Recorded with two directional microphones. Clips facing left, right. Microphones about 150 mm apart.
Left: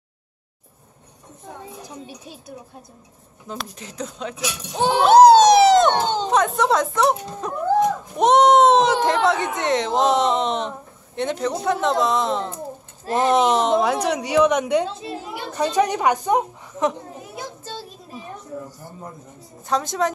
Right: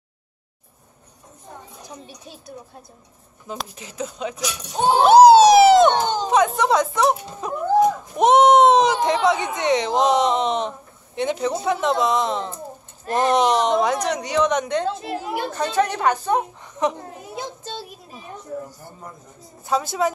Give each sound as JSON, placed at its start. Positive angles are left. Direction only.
{"t": 3.7, "sound": "speech", "side_deg": -5}
{"t": 15.0, "sound": "a woman's voice", "side_deg": -60}
{"t": 15.5, "sound": "speech", "side_deg": 15}
{"t": 17.4, "sound": "child singing", "side_deg": -20}
{"t": 19.7, "sound": "speech", "side_deg": -5}